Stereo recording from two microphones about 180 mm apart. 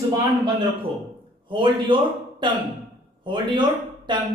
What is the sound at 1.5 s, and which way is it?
Speech, 25° right (ahead or behind).